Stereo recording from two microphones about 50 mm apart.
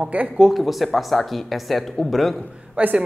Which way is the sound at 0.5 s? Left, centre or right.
Centre.